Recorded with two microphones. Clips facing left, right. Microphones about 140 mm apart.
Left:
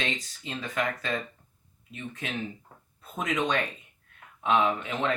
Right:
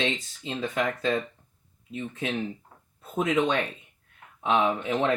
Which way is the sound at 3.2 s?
25° right (ahead or behind).